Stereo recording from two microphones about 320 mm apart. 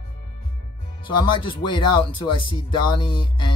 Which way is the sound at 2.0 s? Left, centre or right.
Centre.